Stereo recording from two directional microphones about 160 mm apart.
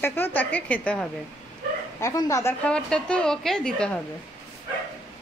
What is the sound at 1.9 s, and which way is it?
Speech, 20° left (ahead or behind).